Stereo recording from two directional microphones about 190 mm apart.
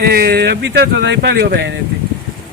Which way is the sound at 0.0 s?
55° right (ahead or behind).